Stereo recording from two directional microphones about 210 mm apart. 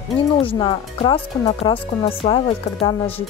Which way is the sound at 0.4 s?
25° left (ahead or behind).